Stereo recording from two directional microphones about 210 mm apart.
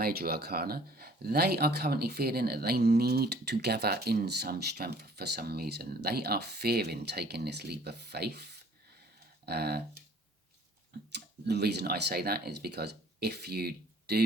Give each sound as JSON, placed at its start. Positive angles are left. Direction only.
{"t": 0.0, "sound": "speech", "side_deg": -45}
{"t": 9.5, "sound": "speech", "side_deg": -50}
{"t": 11.1, "sound": "speech", "side_deg": -50}